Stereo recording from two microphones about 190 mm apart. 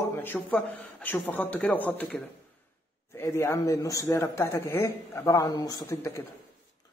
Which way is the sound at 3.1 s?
15° left (ahead or behind).